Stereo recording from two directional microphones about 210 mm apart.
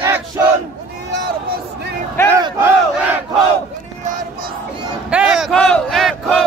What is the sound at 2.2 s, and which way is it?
Battle cry, 10° left (ahead or behind).